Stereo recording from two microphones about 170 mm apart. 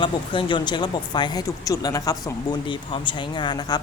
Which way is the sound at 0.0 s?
30° left (ahead or behind).